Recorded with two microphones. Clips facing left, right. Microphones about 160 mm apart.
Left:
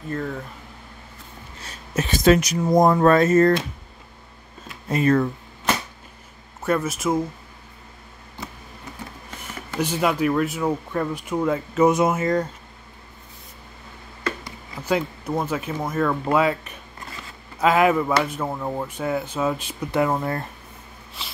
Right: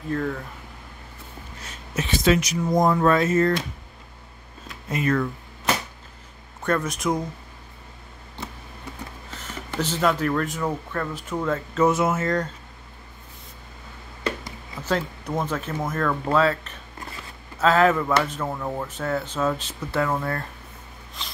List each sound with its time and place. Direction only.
1.7 s speech: 40° left (ahead or behind)
4.8 s speech: 30° left (ahead or behind)
6.6 s speech: 5° left (ahead or behind)
9.3 s speech: 10° left (ahead or behind)
14.8 s speech: 10° left (ahead or behind)
21.2 s zipper: 5° left (ahead or behind)